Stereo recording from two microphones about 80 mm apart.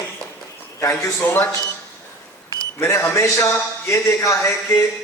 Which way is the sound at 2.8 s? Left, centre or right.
Left.